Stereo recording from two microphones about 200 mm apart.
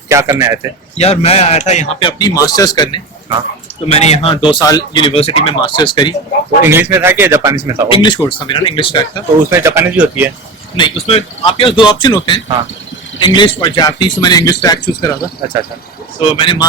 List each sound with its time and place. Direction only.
0.1 s speech: 15° right (ahead or behind)
0.9 s speech: 30° left (ahead or behind)
3.8 s speech: 30° left (ahead or behind)
6.7 s speech: 10° right (ahead or behind)
7.9 s speech: 25° left (ahead or behind)
9.5 s speech: 10° right (ahead or behind)
10.8 s speech: 25° left (ahead or behind)